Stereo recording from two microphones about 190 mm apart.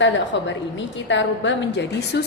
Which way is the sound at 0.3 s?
70° left (ahead or behind).